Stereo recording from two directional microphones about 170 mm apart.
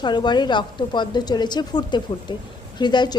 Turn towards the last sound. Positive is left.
turn(degrees=25)  # may be behind; listen again after turning